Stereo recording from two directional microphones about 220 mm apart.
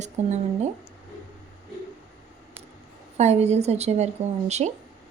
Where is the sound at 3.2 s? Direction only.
30° right (ahead or behind).